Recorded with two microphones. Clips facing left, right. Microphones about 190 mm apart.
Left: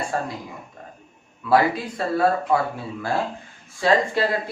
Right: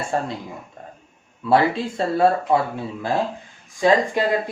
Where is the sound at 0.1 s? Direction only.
25° right (ahead or behind).